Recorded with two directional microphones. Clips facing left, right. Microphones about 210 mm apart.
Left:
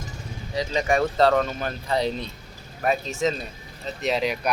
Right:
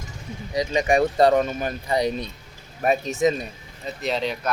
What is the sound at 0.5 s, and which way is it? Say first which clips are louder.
Speech: right 3 dB; 15° right (ahead or behind).